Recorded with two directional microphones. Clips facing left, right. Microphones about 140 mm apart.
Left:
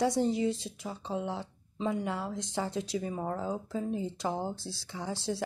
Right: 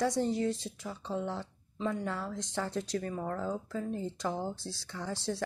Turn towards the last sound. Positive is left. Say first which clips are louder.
# left 1 dB
turn(degrees=10)  # may be behind; listen again after turning